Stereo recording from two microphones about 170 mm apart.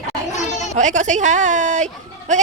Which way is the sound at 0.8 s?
45° right (ahead or behind).